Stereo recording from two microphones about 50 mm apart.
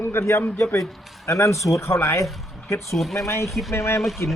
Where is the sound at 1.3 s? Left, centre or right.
Left.